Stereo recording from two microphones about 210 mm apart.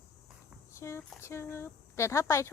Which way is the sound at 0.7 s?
15° left (ahead or behind).